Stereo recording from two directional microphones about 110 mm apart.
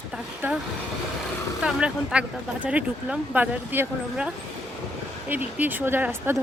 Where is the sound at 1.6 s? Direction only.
10° right (ahead or behind).